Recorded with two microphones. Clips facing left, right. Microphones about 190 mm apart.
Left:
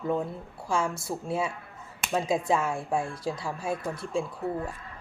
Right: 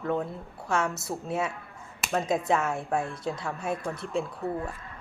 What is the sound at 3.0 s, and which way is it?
Speech, 25° right (ahead or behind).